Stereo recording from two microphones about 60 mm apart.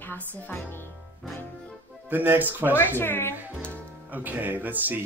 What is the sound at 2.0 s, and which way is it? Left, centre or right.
Speech, right.